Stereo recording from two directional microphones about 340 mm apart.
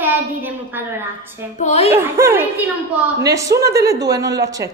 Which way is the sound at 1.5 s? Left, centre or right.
Centre.